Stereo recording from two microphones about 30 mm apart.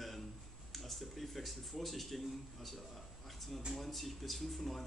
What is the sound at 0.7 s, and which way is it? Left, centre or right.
Speech, centre.